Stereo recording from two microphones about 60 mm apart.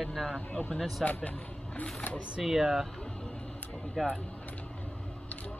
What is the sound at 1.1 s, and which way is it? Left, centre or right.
Speech, left.